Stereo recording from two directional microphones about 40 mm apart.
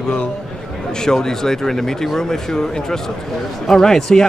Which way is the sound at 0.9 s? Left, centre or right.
Centre.